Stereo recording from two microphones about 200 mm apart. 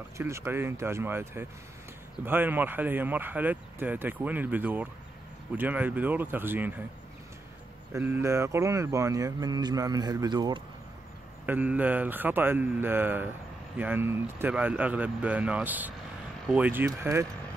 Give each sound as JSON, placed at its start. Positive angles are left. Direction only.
{"t": 0.2, "sound": "speech", "side_deg": -10}
{"t": 7.9, "sound": "speech", "side_deg": -10}
{"t": 11.4, "sound": "speech", "side_deg": -10}